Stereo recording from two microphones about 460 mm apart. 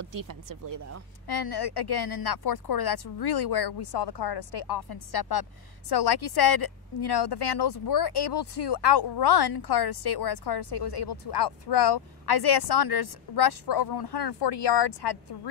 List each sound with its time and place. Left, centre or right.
0.0 s speech: right
1.2 s speech: left